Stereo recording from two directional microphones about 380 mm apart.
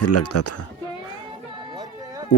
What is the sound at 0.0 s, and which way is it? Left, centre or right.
Speech, left.